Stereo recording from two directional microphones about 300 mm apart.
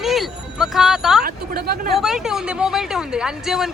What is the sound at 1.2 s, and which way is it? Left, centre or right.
Speech, right.